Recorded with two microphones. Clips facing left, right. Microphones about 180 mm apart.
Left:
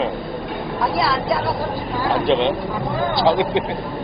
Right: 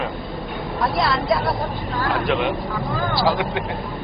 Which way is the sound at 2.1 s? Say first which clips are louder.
Left 4 dB; 30° left (ahead or behind).